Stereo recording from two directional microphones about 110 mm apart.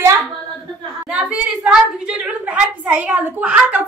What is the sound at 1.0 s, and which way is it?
A woman's voice, 10° right (ahead or behind).